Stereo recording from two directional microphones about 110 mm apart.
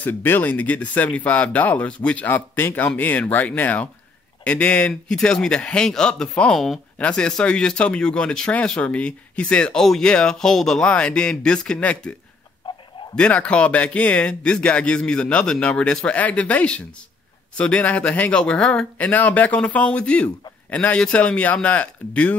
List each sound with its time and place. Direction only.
0.0 s speech: 15° left (ahead or behind)
13.1 s speech: 10° left (ahead or behind)